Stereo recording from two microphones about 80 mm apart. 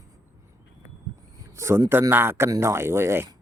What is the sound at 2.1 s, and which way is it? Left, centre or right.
Speech, right.